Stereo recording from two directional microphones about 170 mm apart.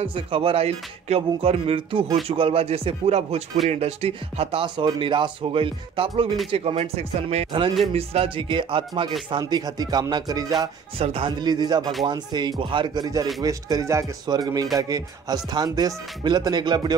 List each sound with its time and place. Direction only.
0.0 s speech: 35° right (ahead or behind)
11.0 s speech: 35° right (ahead or behind)